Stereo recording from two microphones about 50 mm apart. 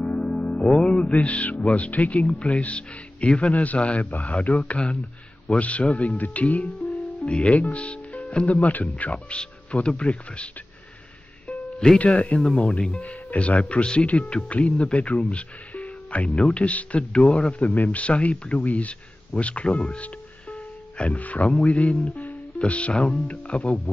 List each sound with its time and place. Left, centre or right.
0.3 s music: left
0.7 s speech: centre
8.5 s speech: left
9.1 s speech: centre
12.0 s speech: left
12.4 s speech: centre